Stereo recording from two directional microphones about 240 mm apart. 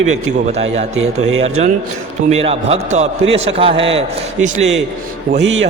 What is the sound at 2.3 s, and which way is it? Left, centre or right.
A man's voice, right.